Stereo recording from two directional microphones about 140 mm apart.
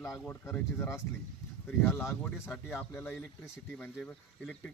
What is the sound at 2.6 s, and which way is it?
Speech, 15° left (ahead or behind).